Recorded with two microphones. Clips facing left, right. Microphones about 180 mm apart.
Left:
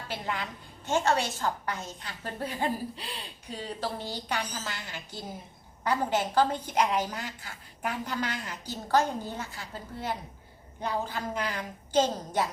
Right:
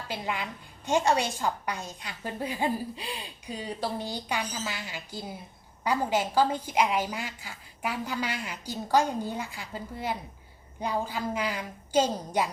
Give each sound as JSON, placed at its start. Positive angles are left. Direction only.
{"t": 0.1, "sound": "a woman's voice", "side_deg": -10}